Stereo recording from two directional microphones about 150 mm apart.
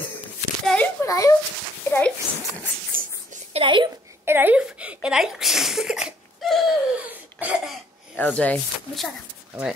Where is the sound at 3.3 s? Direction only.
50° right (ahead or behind).